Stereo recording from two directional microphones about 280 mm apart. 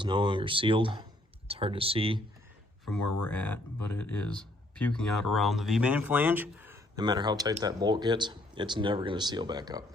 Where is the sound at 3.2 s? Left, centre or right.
Centre.